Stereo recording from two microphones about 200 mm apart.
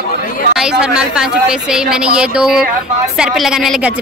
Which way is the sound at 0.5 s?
5° right (ahead or behind).